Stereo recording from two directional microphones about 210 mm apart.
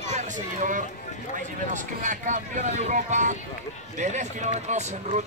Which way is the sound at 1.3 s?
35° right (ahead or behind).